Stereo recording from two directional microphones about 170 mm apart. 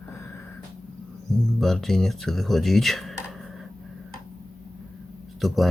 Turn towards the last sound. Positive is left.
turn(degrees=0)  # may be behind; listen again after turning